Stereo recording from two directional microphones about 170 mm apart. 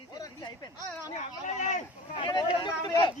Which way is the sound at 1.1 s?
45° left (ahead or behind).